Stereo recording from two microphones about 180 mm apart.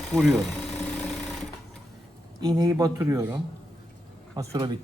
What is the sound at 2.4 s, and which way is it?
A man's voice, 20° right (ahead or behind).